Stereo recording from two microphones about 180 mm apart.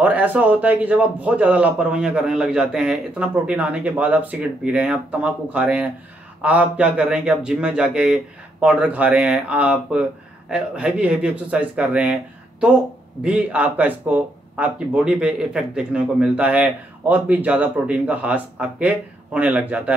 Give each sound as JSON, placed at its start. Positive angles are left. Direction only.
{"t": 0.0, "sound": "speech", "side_deg": -10}